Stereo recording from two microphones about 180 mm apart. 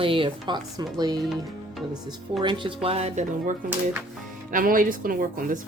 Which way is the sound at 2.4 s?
25° right (ahead or behind).